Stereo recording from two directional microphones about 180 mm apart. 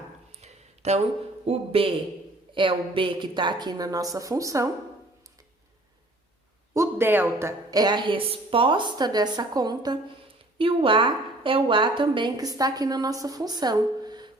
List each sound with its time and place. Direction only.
0.3 s a sound: 35° right (ahead or behind)
1.5 s a woman's voice: 30° right (ahead or behind)
6.7 s a woman's voice: 10° right (ahead or behind)